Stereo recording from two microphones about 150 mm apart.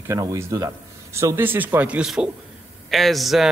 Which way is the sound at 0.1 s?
20° right (ahead or behind).